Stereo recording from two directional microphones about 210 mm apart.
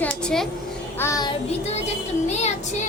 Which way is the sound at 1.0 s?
20° left (ahead or behind).